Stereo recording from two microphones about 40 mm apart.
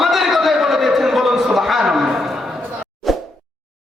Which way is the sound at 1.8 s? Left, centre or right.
Centre.